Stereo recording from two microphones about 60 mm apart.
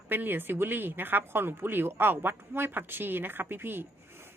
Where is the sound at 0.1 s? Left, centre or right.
Right.